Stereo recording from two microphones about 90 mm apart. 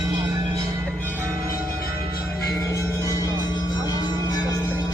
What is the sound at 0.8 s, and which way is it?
Music, 20° left (ahead or behind).